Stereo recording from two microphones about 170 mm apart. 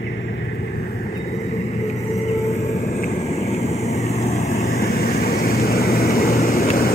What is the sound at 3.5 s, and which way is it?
Vehicle, 40° left (ahead or behind).